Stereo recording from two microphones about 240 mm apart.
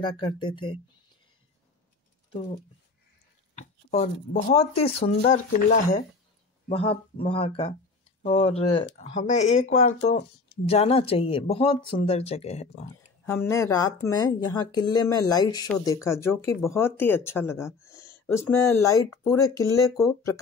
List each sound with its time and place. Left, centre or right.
0.0 s speech: centre
2.3 s speech: left
3.9 s speech: left
13.2 s speech: centre